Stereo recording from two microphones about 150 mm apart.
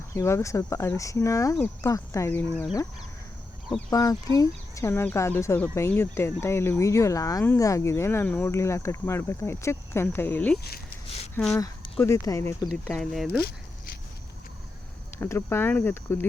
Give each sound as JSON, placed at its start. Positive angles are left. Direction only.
{"t": 0.1, "sound": "speech", "side_deg": 20}
{"t": 3.8, "sound": "speech", "side_deg": 25}
{"t": 10.6, "sound": "speech", "side_deg": 90}
{"t": 12.0, "sound": "speech", "side_deg": 20}
{"t": 12.6, "sound": "speech", "side_deg": 5}
{"t": 15.2, "sound": "speech", "side_deg": 15}